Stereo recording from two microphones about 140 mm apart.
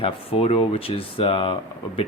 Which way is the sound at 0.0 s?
45° left (ahead or behind).